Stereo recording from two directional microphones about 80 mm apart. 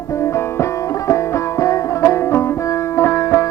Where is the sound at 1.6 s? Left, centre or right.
Left.